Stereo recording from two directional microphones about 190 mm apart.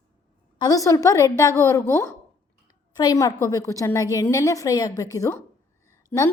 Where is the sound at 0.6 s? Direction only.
20° left (ahead or behind).